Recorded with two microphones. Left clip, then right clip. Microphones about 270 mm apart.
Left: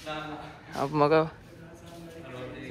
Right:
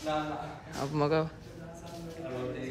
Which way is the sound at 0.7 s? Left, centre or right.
Centre.